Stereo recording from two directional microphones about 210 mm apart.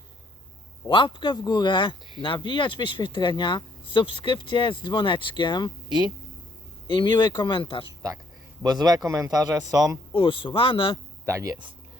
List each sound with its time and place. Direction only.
0.9 s speech: 25° left (ahead or behind)
6.8 s speech: 20° left (ahead or behind)
8.6 s speech: 20° right (ahead or behind)
10.2 s speech: 25° left (ahead or behind)
11.3 s speech: 15° right (ahead or behind)